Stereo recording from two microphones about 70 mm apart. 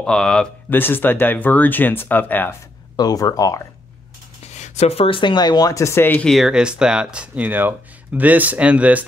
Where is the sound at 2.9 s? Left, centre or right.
Left.